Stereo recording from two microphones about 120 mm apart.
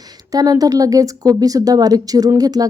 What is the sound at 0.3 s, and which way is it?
Speech, 30° right (ahead or behind).